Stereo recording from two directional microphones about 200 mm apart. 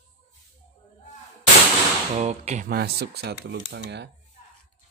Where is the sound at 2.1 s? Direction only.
35° right (ahead or behind).